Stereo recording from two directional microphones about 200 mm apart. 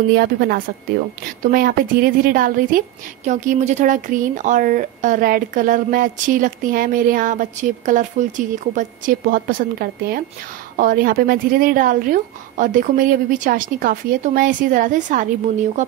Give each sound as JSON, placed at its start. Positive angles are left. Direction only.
{"t": 0.1, "sound": "a woman's voice", "side_deg": -50}